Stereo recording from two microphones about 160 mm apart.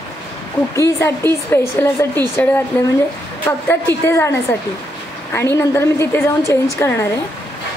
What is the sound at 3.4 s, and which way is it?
A woman's voice, 15° left (ahead or behind).